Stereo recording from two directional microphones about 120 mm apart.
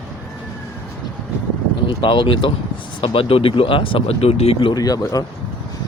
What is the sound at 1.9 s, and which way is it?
Speech, 45° left (ahead or behind).